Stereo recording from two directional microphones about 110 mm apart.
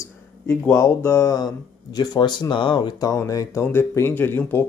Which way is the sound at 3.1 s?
30° left (ahead or behind).